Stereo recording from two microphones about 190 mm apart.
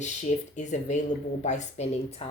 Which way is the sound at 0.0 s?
40° left (ahead or behind).